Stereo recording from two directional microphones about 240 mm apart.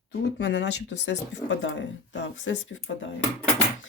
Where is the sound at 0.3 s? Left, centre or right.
Left.